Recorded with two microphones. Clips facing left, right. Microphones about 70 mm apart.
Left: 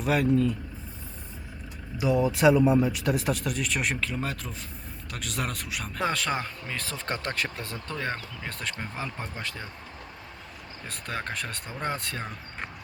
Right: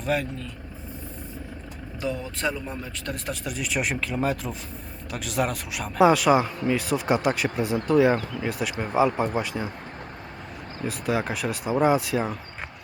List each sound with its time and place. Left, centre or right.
0.0 s speech: centre
2.0 s speech: centre
9.0 s speech: right
9.4 s speech: centre
10.8 s speech: centre